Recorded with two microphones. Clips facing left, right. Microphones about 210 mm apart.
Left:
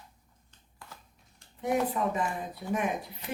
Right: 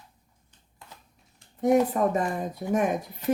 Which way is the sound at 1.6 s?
45° right (ahead or behind).